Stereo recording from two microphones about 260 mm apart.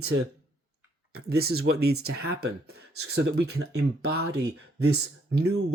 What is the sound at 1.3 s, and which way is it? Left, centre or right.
Speech, right.